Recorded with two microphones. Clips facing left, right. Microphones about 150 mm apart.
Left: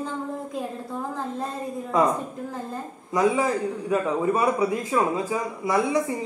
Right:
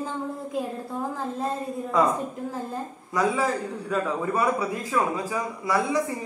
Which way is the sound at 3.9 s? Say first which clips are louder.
Left 3 dB; 20° left (ahead or behind).